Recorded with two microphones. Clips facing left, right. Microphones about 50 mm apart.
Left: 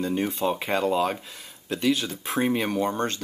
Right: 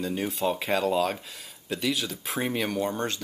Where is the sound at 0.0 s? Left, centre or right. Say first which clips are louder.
Left 2 dB; centre.